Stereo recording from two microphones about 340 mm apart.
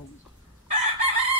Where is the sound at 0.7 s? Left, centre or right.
Centre.